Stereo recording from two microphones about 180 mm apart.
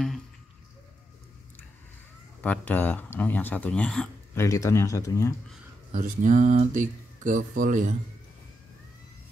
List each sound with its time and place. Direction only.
2.4 s speech: 10° left (ahead or behind)
4.4 s speech: 15° left (ahead or behind)
5.9 s speech: 45° right (ahead or behind)